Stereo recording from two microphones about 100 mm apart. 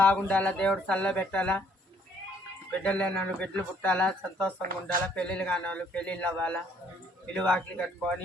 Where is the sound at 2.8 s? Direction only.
10° left (ahead or behind).